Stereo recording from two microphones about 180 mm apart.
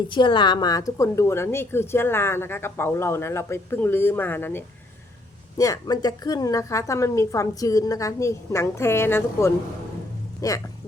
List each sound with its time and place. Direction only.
0.1 s a woman's voice: 25° left (ahead or behind)